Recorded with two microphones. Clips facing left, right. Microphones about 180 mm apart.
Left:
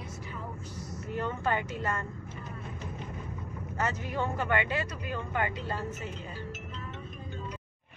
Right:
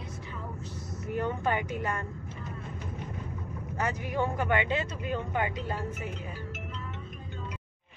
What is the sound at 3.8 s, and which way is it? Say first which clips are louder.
Speech: right 2 dB; 15° right (ahead or behind).